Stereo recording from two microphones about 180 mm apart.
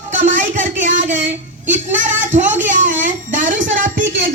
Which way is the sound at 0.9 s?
90° right.